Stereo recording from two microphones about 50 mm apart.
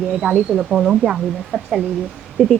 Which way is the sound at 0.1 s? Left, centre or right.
Centre.